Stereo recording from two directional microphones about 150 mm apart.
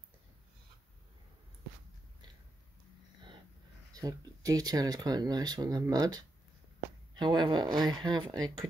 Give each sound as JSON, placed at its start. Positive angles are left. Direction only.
{"t": 3.9, "sound": "speech", "side_deg": -25}